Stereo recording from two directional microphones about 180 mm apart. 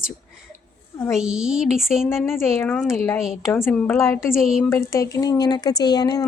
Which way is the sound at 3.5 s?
15° left (ahead or behind).